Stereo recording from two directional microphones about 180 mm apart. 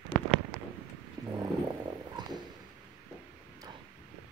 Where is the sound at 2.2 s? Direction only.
25° right (ahead or behind).